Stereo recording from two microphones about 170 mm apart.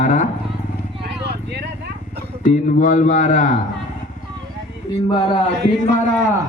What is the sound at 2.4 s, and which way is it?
A man's voice, 50° left (ahead or behind).